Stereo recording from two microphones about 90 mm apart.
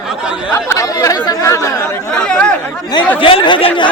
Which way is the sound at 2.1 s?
10° left (ahead or behind).